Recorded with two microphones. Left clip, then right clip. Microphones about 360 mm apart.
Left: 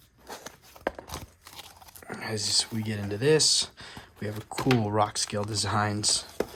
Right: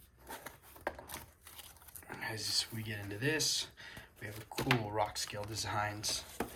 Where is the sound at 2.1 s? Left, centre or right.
Centre.